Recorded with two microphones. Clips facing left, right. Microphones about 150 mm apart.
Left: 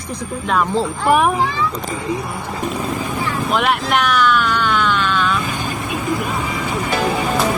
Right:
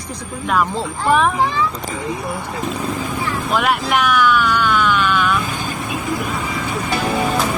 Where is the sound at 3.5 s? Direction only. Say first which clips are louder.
Even; centre (ahead or behind).